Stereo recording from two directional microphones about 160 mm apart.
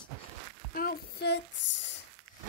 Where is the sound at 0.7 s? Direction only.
65° left (ahead or behind).